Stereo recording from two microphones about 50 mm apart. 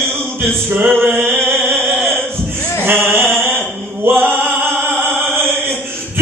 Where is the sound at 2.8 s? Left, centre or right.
Right.